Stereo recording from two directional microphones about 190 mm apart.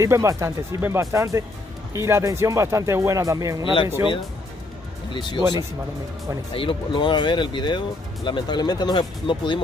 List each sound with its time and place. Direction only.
0.0 s speech: 15° right (ahead or behind)
5.1 s speech: 25° left (ahead or behind)